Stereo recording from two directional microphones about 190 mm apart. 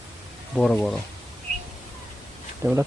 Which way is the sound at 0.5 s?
5° left (ahead or behind).